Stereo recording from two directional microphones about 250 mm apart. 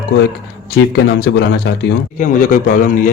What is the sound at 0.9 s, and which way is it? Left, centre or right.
A man's voice, left.